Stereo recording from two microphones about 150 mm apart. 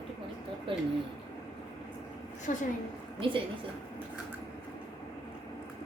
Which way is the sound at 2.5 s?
55° left (ahead or behind).